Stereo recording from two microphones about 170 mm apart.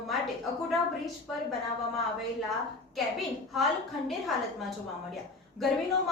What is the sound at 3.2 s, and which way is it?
Speech, centre (ahead or behind).